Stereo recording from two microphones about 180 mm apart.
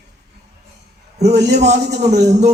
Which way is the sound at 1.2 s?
70° right (ahead or behind).